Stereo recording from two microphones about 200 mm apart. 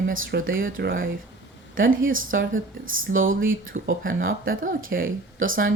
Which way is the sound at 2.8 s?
80° right.